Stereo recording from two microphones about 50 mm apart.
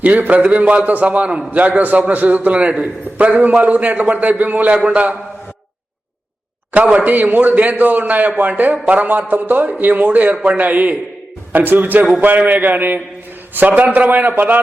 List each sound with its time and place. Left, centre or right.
0.0 s a man's voice: right
6.7 s a man's voice: right